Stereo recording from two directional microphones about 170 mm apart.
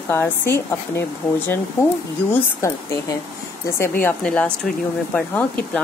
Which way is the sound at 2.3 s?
15° left (ahead or behind).